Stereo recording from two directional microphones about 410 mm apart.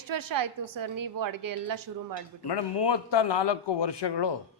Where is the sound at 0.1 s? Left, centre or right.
Right.